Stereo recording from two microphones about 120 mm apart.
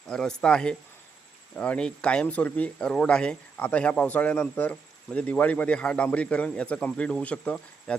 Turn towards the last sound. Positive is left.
turn(degrees=10)  # may be behind; listen again after turning